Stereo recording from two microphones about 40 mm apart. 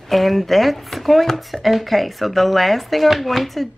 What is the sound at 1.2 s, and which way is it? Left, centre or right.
Speech, centre.